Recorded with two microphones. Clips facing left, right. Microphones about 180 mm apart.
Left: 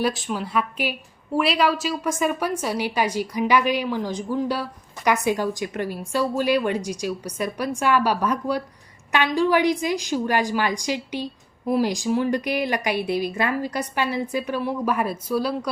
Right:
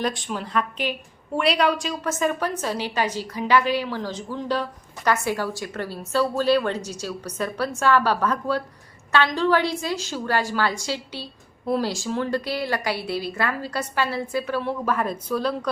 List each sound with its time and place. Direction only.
0.0 s a woman's voice: centre (ahead or behind)